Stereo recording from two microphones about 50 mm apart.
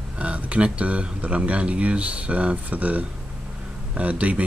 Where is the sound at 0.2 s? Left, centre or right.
Right.